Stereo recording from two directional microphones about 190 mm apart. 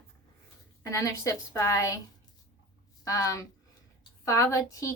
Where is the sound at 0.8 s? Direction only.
15° left (ahead or behind).